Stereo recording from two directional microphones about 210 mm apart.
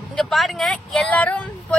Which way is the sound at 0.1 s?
Centre (ahead or behind).